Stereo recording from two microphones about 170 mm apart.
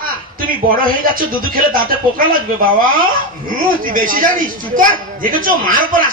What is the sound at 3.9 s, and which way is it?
A child's voice, 55° right (ahead or behind).